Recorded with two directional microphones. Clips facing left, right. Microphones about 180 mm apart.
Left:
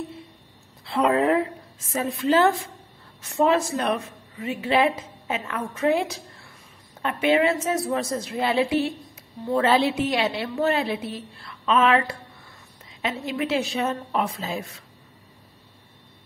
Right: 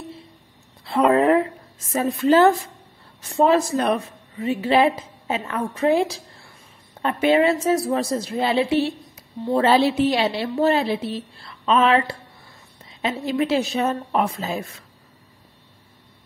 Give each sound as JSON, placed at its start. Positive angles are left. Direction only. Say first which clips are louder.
{"t": 0.8, "sound": "a woman's voice", "louder": "right 4 dB", "side_deg": -50}
{"t": 3.2, "sound": "a woman's voice", "louder": "right 3 dB", "side_deg": -30}